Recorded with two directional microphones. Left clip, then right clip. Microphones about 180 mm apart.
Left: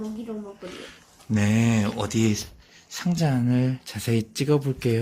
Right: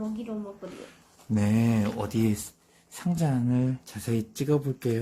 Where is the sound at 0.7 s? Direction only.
Centre (ahead or behind).